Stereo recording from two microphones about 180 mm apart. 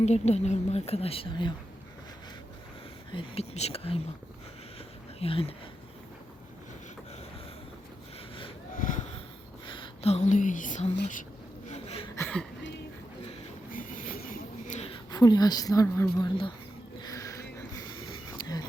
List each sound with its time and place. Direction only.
0.0 s speech: 40° left (ahead or behind)
3.1 s speech: 30° left (ahead or behind)
5.2 s speech: 30° left (ahead or behind)
8.8 s a sound: 45° left (ahead or behind)
9.6 s speech: 25° left (ahead or behind); by 10.9 s 40° left (ahead or behind)
11.7 s a sound: 35° left (ahead or behind)
12.1 s speech: 10° left (ahead or behind)
13.7 s train: 50° left (ahead or behind)
15.1 s a woman's voice: 20° left (ahead or behind)
17.0 s a sound: 20° left (ahead or behind)